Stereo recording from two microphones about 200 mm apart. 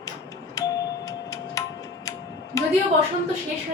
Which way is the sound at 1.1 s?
15° left (ahead or behind).